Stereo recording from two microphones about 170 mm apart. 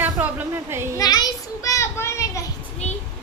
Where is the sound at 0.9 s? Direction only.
25° left (ahead or behind).